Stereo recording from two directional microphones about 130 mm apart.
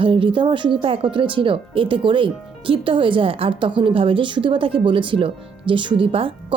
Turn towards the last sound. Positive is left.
turn(degrees=-45)  # may be behind; listen again after turning